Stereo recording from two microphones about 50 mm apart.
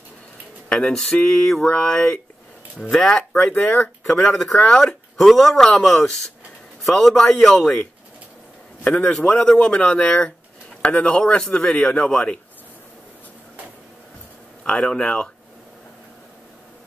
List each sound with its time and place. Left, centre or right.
0.7 s speech: centre
3.5 s a man's voice: left
4.0 s speech: centre
5.1 s a man's voice: centre
8.8 s a man's voice: left
14.6 s speech: centre